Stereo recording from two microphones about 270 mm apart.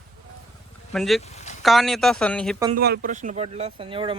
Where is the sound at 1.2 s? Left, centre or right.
Left.